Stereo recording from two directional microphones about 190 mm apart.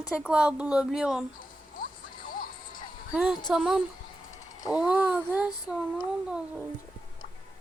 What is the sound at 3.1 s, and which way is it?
Speech, 5° right (ahead or behind).